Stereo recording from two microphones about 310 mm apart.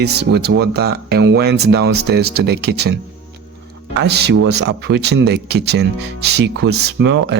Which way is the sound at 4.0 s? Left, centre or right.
Right.